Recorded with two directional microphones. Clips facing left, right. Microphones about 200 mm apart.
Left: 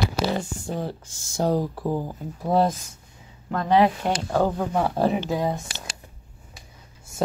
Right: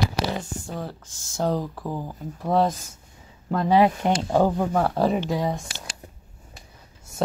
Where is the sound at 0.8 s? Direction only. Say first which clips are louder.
Left 3 dB; 15° left (ahead or behind).